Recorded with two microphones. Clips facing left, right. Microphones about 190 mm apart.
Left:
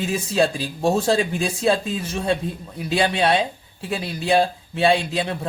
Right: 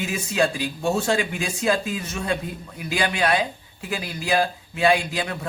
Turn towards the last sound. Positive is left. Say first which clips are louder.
# left 3 dB
turn(degrees=30)  # may be behind; listen again after turning